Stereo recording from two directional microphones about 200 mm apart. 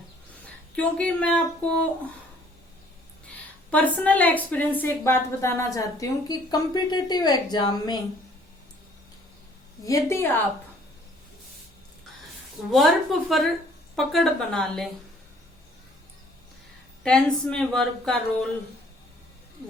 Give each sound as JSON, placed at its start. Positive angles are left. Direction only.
{"t": 0.8, "sound": "a woman's voice", "side_deg": 5}
{"t": 3.7, "sound": "a woman's voice", "side_deg": 5}
{"t": 9.8, "sound": "a woman's voice", "side_deg": 15}
{"t": 12.7, "sound": "a woman's voice", "side_deg": 0}
{"t": 17.0, "sound": "a woman's voice", "side_deg": 5}